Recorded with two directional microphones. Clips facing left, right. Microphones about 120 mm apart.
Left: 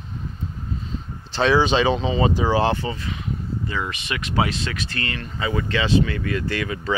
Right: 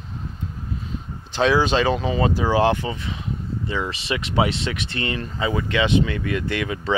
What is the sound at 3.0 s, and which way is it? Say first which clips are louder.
Speech: even; 25° right (ahead or behind).